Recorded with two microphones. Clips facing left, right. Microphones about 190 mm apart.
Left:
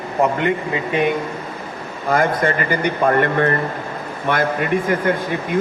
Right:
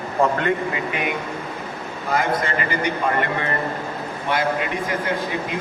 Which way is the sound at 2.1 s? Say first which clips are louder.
Left 4 dB; 50° left (ahead or behind).